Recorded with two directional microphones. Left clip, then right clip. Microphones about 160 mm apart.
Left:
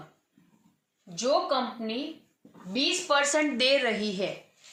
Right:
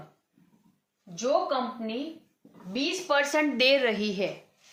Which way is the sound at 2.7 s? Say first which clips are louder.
Left 1 dB; 15° right (ahead or behind).